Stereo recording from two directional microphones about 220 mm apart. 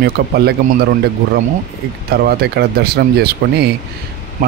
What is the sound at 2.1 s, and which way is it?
Speech, 45° right (ahead or behind).